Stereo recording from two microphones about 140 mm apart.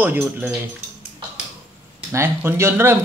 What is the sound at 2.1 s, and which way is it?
Speech, 15° right (ahead or behind).